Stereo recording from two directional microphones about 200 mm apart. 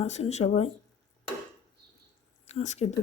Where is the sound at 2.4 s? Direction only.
35° left (ahead or behind).